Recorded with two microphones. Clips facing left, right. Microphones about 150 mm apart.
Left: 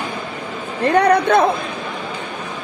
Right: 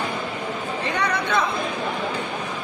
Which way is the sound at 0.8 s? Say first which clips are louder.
Left 13 dB; 55° left (ahead or behind).